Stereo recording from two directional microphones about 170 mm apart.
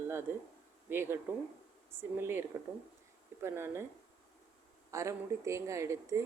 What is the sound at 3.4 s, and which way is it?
Speech, 15° right (ahead or behind).